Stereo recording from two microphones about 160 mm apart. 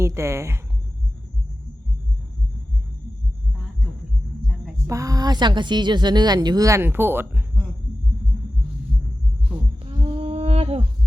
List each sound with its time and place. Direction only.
0.0 s a woman's voice: 15° right (ahead or behind)
4.9 s a woman's voice: 20° right (ahead or behind)
9.8 s humming: 35° right (ahead or behind)